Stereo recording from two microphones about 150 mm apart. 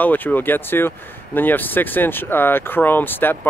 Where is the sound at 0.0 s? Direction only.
10° left (ahead or behind).